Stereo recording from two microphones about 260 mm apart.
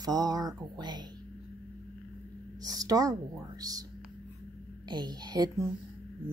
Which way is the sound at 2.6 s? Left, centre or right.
Centre.